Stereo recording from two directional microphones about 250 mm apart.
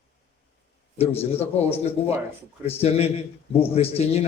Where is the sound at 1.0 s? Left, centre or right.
Left.